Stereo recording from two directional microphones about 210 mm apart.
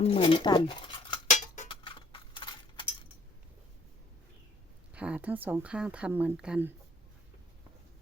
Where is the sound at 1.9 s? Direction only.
25° left (ahead or behind).